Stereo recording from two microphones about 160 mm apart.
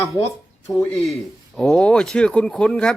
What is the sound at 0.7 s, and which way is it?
Speech, 15° left (ahead or behind).